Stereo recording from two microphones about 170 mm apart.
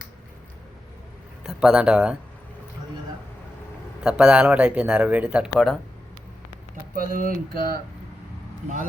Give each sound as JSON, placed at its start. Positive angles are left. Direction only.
{"t": 1.5, "sound": "speech", "side_deg": -5}
{"t": 4.0, "sound": "a man's voice", "side_deg": -5}
{"t": 5.5, "sound": "speech", "side_deg": 5}
{"t": 6.9, "sound": "a sound", "side_deg": -55}